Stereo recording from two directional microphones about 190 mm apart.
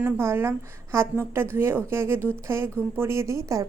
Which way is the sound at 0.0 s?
10° right (ahead or behind).